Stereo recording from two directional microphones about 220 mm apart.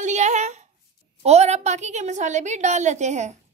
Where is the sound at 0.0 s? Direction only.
30° right (ahead or behind).